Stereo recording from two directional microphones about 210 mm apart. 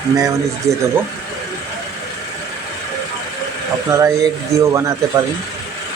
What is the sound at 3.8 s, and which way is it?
Speech, 15° right (ahead or behind).